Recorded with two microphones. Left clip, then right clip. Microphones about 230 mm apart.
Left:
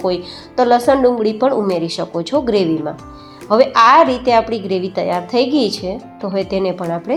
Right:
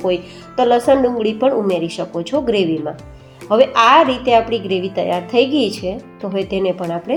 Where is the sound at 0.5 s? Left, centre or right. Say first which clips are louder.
Left 1 dB; centre.